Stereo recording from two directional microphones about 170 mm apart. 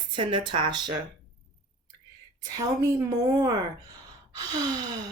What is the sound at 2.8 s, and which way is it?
Speech, 20° right (ahead or behind).